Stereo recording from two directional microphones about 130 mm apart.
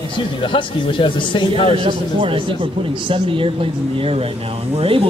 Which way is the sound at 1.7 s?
45° right (ahead or behind).